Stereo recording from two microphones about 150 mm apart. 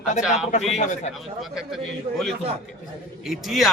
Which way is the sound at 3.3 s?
Centre (ahead or behind).